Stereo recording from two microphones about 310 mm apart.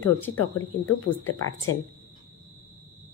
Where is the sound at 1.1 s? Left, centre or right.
Left.